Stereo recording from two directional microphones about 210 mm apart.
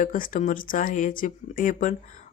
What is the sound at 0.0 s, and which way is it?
Speech, 40° left (ahead or behind).